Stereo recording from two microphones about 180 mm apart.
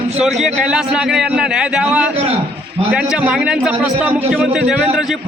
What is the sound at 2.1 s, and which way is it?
Speech, 35° right (ahead or behind).